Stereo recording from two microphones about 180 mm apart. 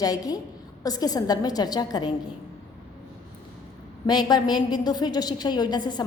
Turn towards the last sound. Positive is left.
turn(degrees=25)  # may be behind; listen again after turning